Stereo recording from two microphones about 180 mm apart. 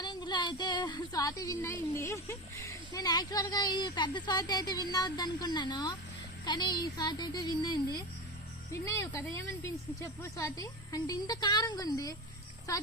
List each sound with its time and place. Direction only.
0.0 s speech: 25° left (ahead or behind)